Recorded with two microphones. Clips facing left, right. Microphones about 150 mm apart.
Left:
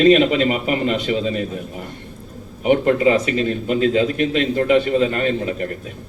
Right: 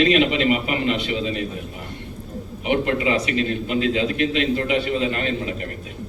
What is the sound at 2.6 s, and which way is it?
A man's voice, 40° left (ahead or behind).